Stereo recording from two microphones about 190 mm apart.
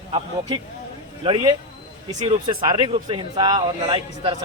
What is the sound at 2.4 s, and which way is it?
A man's voice, 20° right (ahead or behind).